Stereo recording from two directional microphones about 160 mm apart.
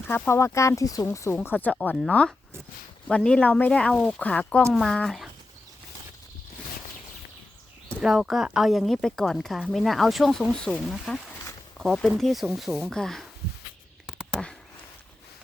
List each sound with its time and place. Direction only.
0.1 s speech: 15° left (ahead or behind); by 5.3 s centre (ahead or behind)
8.0 s speech: centre (ahead or behind)
14.1 s a sound: centre (ahead or behind)